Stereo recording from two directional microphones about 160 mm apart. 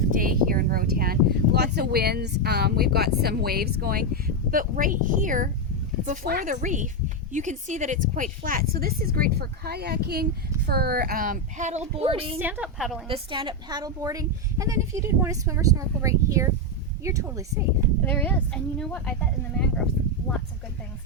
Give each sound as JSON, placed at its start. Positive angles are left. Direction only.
{"t": 0.1, "sound": "a woman's voice", "side_deg": -60}
{"t": 12.4, "sound": "a woman's voice", "side_deg": -10}
{"t": 13.1, "sound": "speech", "side_deg": -35}
{"t": 18.0, "sound": "speech", "side_deg": 10}